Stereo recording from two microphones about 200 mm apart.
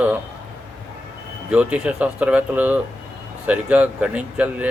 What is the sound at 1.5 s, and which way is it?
Speech, 5° right (ahead or behind).